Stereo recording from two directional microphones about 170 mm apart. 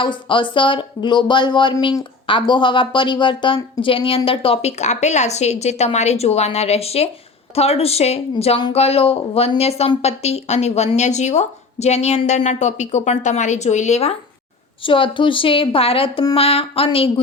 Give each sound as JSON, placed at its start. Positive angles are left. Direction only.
{"t": 0.0, "sound": "speech", "side_deg": 30}